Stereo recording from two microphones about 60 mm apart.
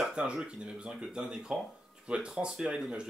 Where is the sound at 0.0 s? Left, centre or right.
Centre.